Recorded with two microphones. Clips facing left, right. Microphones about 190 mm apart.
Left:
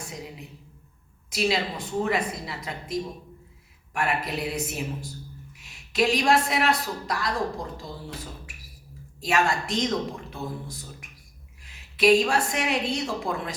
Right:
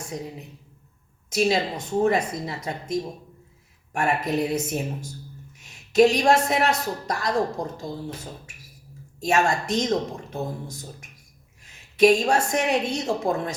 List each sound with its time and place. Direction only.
1.3 s a woman's voice: 45° right (ahead or behind)
9.2 s a woman's voice: 45° right (ahead or behind)